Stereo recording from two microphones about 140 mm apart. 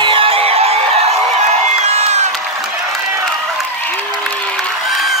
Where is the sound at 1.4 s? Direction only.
50° right (ahead or behind).